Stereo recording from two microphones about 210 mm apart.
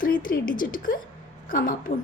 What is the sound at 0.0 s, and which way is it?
A woman's voice, 40° left (ahead or behind).